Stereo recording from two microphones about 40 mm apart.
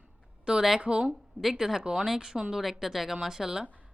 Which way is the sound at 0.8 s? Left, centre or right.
Right.